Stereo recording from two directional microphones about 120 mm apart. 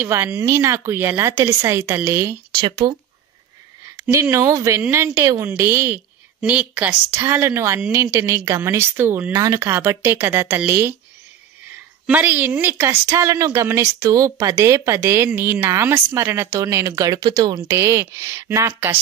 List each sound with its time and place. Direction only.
0.0 s speech: 20° right (ahead or behind)
2.6 s speech: 35° right (ahead or behind)
3.9 s speech: 20° right (ahead or behind)
9.3 s speech: 30° right (ahead or behind)
12.1 s speech: 15° right (ahead or behind)